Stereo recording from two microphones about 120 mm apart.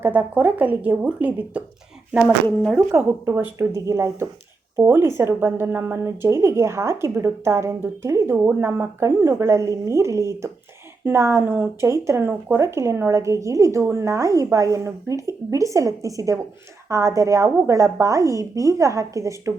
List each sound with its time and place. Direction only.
0.0 s a woman's voice: 15° right (ahead or behind)
2.2 s speech: 5° left (ahead or behind)
3.0 s speech: 15° right (ahead or behind)